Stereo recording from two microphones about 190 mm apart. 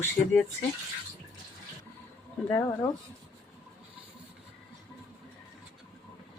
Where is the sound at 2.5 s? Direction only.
10° left (ahead or behind).